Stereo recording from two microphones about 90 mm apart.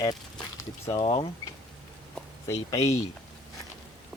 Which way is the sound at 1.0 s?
90° left.